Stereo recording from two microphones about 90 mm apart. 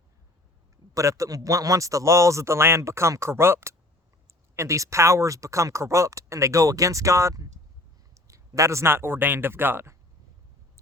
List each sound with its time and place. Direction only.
0.9 s speech: 35° right (ahead or behind)